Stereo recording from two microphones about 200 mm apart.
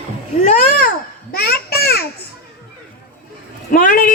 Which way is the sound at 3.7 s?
45° left (ahead or behind).